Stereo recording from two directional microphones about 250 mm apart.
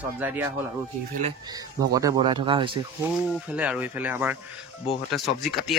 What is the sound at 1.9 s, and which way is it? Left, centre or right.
Speech, centre.